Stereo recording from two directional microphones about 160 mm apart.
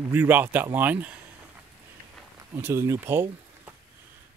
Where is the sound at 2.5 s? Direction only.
15° right (ahead or behind).